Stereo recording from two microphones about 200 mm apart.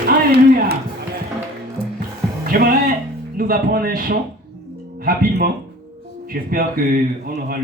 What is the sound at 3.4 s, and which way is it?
A man's voice, 45° right (ahead or behind).